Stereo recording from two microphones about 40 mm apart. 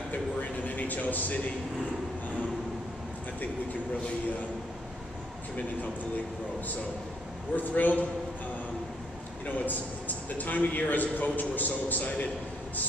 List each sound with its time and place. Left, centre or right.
0.1 s a sound: left
7.5 s a man's voice: left
9.7 s a man's voice: left